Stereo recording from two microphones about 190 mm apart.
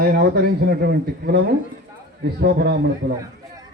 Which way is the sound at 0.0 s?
55° right (ahead or behind).